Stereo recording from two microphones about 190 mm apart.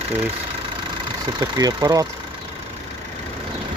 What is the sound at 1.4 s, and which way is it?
Speech, 20° right (ahead or behind).